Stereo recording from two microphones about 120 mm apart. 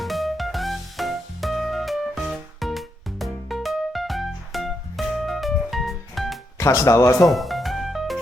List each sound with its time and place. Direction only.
0.0 s music: centre (ahead or behind)
6.6 s speech: 25° left (ahead or behind)
7.3 s music: centre (ahead or behind)